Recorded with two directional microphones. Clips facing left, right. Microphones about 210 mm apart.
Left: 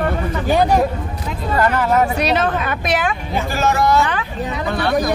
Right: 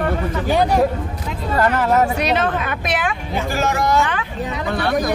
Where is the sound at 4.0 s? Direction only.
35° left (ahead or behind).